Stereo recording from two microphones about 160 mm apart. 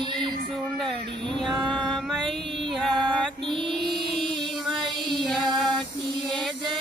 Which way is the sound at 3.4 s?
30° right (ahead or behind).